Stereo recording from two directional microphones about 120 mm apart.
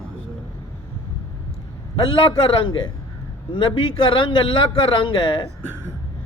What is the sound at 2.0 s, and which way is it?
A man's voice, 45° left (ahead or behind).